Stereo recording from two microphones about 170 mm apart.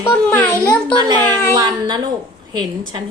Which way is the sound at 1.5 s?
25° right (ahead or behind).